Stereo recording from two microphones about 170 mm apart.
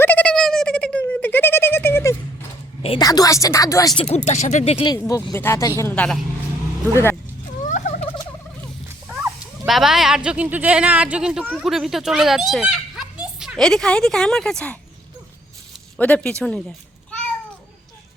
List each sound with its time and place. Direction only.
0.0 s bird: 10° left (ahead or behind)
3.0 s speech: 20° left (ahead or behind)
4.0 s speech: 45° left (ahead or behind)
4.9 s speech: 20° left (ahead or behind)
7.6 s gobble: 45° left (ahead or behind)
9.6 s speech: centre (ahead or behind)
16.0 s speech: 10° left (ahead or behind)
16.4 s a sound: 5° left (ahead or behind)